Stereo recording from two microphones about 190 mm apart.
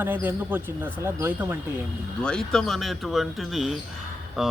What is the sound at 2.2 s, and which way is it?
Speech, 5° left (ahead or behind).